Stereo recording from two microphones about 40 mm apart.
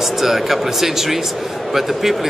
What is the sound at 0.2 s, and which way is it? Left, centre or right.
A man's voice, centre.